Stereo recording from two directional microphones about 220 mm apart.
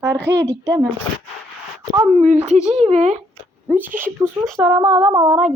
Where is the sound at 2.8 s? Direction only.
30° right (ahead or behind).